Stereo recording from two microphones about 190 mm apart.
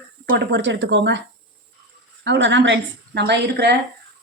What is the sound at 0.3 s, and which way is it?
Speech, 70° right (ahead or behind).